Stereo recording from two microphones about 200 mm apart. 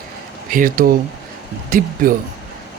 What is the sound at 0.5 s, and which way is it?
Speech, 45° right (ahead or behind).